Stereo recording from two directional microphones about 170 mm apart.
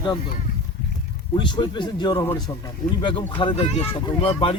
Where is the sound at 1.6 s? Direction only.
25° left (ahead or behind).